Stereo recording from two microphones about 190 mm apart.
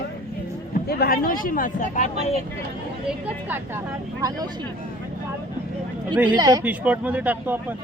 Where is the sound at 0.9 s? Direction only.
55° left (ahead or behind); by 2.4 s 35° left (ahead or behind).